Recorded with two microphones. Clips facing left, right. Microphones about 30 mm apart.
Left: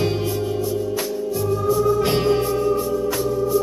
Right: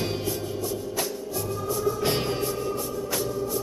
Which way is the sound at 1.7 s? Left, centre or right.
Centre.